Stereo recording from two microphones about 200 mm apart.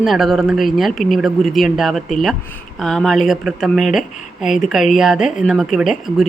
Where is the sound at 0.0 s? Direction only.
Centre (ahead or behind).